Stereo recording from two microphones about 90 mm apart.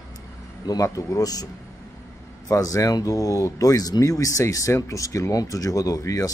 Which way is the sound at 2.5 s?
40° left (ahead or behind).